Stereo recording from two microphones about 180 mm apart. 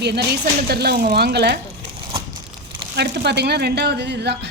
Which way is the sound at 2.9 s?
70° right (ahead or behind).